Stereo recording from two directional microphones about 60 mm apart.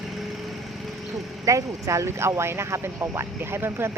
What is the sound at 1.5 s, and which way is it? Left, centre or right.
Speech, right.